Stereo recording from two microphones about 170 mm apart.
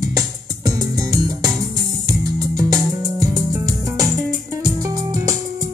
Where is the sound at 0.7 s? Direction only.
20° right (ahead or behind).